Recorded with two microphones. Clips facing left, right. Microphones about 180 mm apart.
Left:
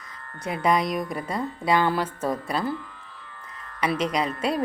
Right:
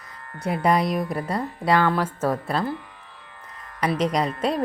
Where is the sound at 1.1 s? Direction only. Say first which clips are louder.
Right 2 dB; 35° right (ahead or behind).